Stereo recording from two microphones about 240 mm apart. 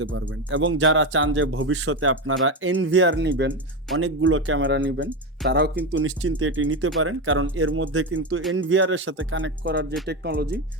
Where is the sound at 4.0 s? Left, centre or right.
Right.